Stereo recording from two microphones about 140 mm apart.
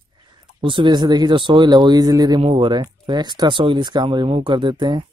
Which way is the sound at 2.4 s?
40° right (ahead or behind).